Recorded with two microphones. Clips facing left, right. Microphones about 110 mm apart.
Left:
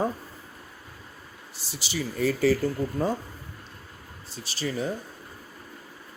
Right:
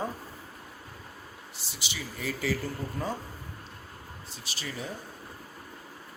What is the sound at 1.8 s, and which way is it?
Speech, 40° left (ahead or behind).